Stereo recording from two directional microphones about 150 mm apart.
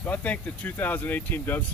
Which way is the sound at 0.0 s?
10° left (ahead or behind).